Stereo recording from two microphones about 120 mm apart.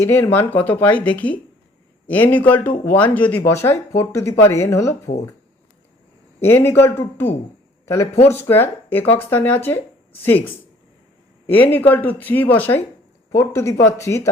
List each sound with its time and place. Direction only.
0.0 s speech: 20° left (ahead or behind)
6.4 s speech: 20° left (ahead or behind)